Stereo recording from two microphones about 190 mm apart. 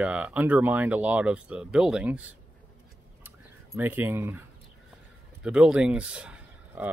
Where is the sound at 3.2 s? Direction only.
10° right (ahead or behind).